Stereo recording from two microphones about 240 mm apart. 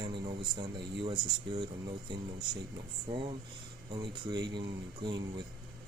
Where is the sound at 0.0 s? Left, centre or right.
Centre.